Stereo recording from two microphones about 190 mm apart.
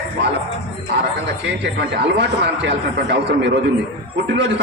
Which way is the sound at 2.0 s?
65° right (ahead or behind).